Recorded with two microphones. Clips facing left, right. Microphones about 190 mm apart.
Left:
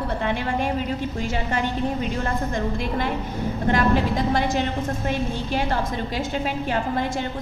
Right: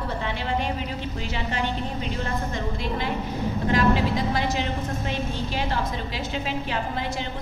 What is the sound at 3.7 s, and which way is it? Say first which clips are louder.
A woman's voice: even; 50° left (ahead or behind).